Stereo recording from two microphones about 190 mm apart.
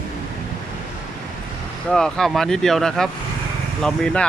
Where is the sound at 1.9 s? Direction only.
5° left (ahead or behind).